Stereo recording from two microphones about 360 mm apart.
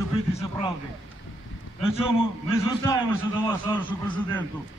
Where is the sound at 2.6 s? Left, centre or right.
Centre.